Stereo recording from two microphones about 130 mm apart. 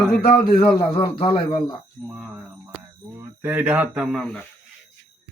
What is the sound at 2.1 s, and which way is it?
A man's voice, 5° right (ahead or behind).